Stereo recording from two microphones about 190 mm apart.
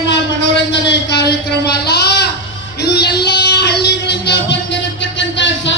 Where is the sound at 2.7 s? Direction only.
60° left (ahead or behind).